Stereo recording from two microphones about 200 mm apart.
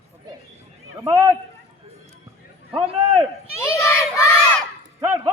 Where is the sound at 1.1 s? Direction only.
10° right (ahead or behind).